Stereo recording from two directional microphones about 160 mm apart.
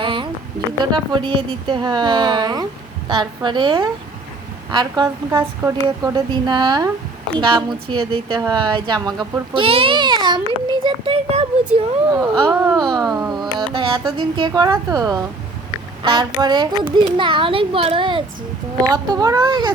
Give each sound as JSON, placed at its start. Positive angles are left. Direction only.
{"t": 0.0, "sound": "a sound", "side_deg": -30}
{"t": 0.9, "sound": "a woman's voice", "side_deg": -25}
{"t": 11.7, "sound": "speech", "side_deg": -10}
{"t": 12.7, "sound": "a woman's voice", "side_deg": -25}